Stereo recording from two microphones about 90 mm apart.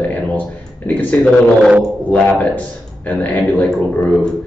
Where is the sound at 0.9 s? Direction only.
20° left (ahead or behind).